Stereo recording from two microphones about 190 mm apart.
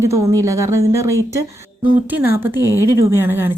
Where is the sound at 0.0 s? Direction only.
15° right (ahead or behind).